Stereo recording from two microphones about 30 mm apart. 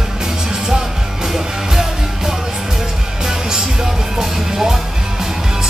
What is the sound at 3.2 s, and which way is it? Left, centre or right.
Music, centre.